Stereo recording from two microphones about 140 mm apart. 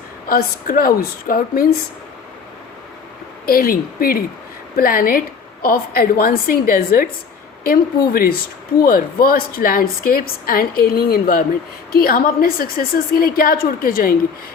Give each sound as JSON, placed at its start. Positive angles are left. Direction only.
{"t": 0.3, "sound": "a woman's voice", "side_deg": 90}
{"t": 3.4, "sound": "a woman's voice", "side_deg": 90}